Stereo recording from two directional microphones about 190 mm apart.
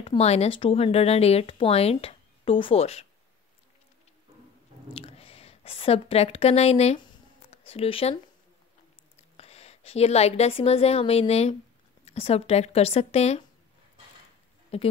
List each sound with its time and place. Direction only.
0.0 s speech: 30° left (ahead or behind)
4.9 s speech: 30° left (ahead or behind)
9.4 s a woman's voice: 35° left (ahead or behind)
14.7 s speech: 35° left (ahead or behind)